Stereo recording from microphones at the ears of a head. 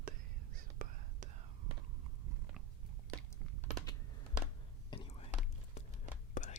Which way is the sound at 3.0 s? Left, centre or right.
Right.